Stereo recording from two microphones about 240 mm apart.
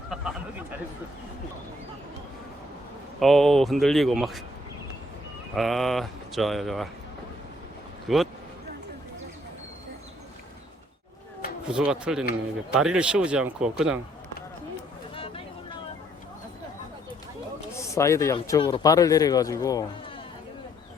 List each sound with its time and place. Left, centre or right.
3.2 s speech: centre
5.5 s speech: centre
8.0 s speech: centre
11.7 s speech: centre
15.1 s a sound: left
17.9 s speech: centre